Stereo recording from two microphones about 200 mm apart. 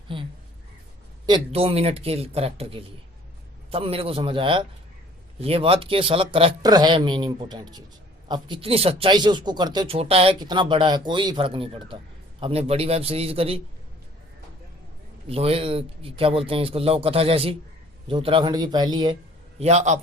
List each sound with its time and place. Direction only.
0.1 s a sound: 25° right (ahead or behind)
1.3 s speech: 30° right (ahead or behind)
15.3 s speech: 30° right (ahead or behind)
19.5 s a man's voice: 35° right (ahead or behind)